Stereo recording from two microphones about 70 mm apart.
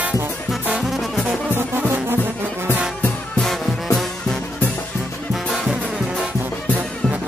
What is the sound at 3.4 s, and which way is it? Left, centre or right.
Music, centre.